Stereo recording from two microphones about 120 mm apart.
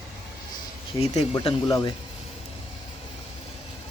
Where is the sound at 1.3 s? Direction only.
50° left (ahead or behind).